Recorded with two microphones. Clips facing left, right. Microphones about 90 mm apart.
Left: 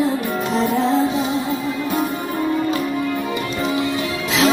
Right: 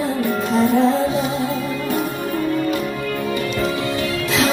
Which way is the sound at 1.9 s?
20° left (ahead or behind).